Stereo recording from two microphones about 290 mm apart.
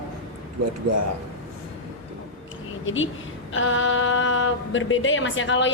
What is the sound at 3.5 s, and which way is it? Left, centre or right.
Speech, left.